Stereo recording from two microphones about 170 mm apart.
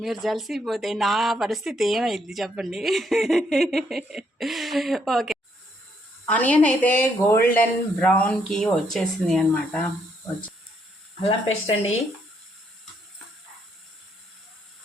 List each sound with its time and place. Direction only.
0.0 s speech: centre (ahead or behind)
11.2 s speech: 35° left (ahead or behind)